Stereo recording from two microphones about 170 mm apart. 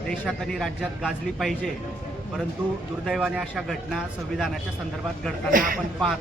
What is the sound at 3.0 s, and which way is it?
A man's voice, 5° right (ahead or behind).